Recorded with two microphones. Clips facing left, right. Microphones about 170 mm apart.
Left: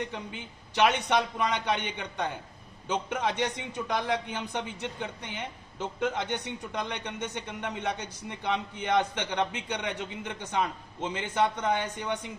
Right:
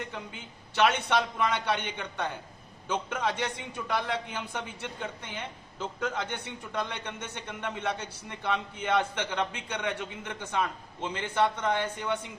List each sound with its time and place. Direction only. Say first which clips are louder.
0.8 s a man's voice: left 1 dB; 15° left (ahead or behind)